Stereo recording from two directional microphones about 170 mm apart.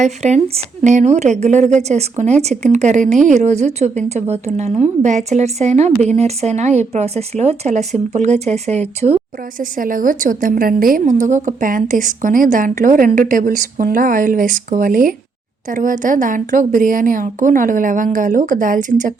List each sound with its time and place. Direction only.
0.0 s a woman's voice: 45° right (ahead or behind)
9.6 s a woman's voice: 55° right (ahead or behind)